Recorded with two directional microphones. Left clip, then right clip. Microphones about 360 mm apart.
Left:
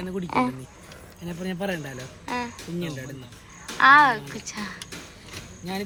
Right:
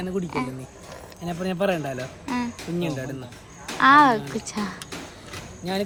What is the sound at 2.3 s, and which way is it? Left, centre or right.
Speech, centre.